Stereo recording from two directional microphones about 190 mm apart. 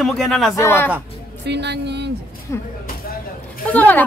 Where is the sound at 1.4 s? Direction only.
65° right (ahead or behind).